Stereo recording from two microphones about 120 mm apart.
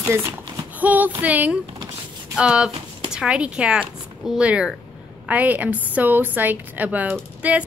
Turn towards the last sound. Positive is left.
turn(degrees=-10)  # may be behind; listen again after turning